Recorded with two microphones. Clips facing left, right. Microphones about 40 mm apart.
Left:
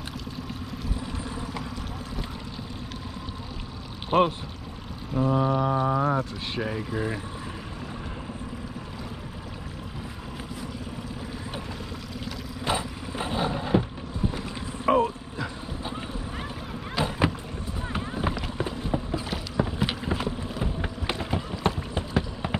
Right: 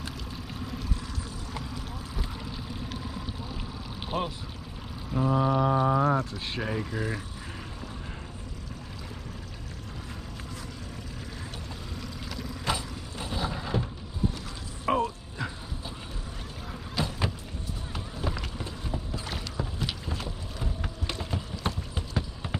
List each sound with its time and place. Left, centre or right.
4.1 s speech: centre
5.1 s speech: centre
12.6 s a sound: left
14.9 s vehicle: centre
17.0 s boat: centre
17.9 s boat: left
19.5 s a sound: left